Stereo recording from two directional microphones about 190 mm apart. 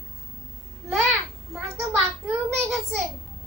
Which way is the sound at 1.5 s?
Centre (ahead or behind).